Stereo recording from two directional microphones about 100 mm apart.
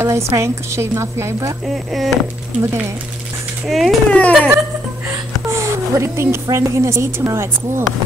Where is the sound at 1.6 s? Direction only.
Centre (ahead or behind).